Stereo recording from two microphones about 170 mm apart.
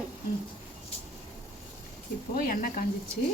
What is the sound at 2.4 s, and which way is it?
Speech, 55° left (ahead or behind).